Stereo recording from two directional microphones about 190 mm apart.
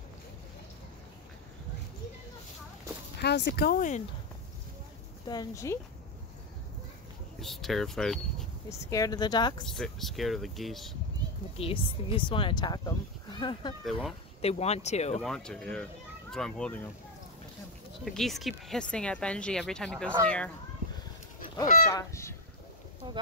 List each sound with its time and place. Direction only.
3.2 s speech: 65° left (ahead or behind); by 4.0 s 45° left (ahead or behind)
5.3 s speech: 20° left (ahead or behind)
7.3 s speech: centre (ahead or behind)
8.6 s speech: 15° left (ahead or behind)
9.7 s speech: centre (ahead or behind)
11.5 s speech: 30° left (ahead or behind)
13.8 s speech: centre (ahead or behind)
14.4 s speech: 35° left (ahead or behind)
15.2 s a child's voice: 5° left (ahead or behind)
18.0 s speech: centre (ahead or behind)
21.9 s speech: 15° left (ahead or behind)